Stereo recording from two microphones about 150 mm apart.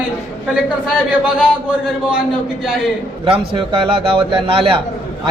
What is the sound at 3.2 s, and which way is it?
A man's voice, 35° right (ahead or behind).